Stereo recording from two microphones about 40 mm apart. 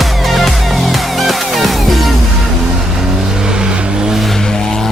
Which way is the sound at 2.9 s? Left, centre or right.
Centre.